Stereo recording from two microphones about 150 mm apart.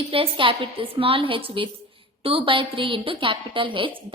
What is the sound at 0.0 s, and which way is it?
A woman's voice, 40° right (ahead or behind).